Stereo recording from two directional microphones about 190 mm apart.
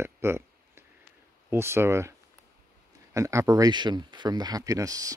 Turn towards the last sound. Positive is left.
turn(degrees=-20)  # may be behind; listen again after turning